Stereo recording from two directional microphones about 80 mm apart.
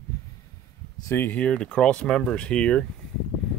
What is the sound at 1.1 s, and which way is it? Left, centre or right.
Speech, left.